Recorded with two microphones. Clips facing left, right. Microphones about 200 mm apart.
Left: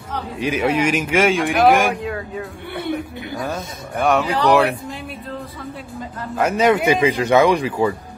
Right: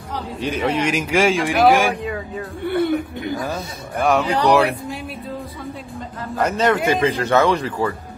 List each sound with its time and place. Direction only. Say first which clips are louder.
0.1 s speech: left 2 dB; 5° left (ahead or behind)
6.3 s speech: left 2 dB; 10° left (ahead or behind)